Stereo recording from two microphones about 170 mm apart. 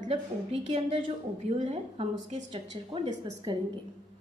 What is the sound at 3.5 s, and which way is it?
Speech, 25° right (ahead or behind).